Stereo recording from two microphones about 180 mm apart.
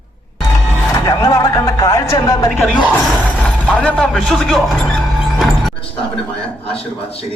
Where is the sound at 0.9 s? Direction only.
20° left (ahead or behind).